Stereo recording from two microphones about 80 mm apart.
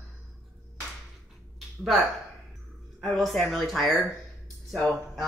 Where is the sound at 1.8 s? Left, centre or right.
Centre.